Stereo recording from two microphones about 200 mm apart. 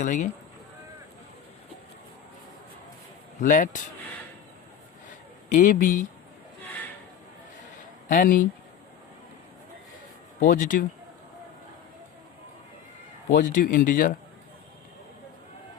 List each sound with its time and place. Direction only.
0.0 s speech: 35° left (ahead or behind)
3.4 s speech: 40° left (ahead or behind)
5.5 s speech: 40° left (ahead or behind)
8.0 s speech: 45° left (ahead or behind)
10.4 s speech: 45° left (ahead or behind)
13.3 s speech: 45° left (ahead or behind)